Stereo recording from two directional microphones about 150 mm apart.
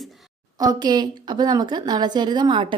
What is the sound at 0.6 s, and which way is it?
A woman's voice, 25° right (ahead or behind).